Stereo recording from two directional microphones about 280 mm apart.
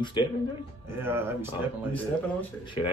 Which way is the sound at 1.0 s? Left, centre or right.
Centre.